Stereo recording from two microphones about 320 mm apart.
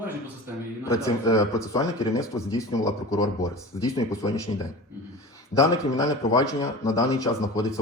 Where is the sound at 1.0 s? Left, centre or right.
Centre.